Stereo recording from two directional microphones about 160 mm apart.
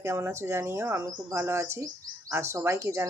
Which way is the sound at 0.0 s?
20° right (ahead or behind).